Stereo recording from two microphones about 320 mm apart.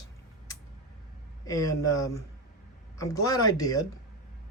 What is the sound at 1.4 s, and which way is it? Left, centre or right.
Speech, centre.